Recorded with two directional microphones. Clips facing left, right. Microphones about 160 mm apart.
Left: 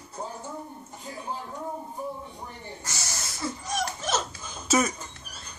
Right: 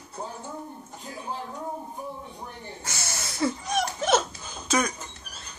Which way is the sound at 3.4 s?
60° right (ahead or behind).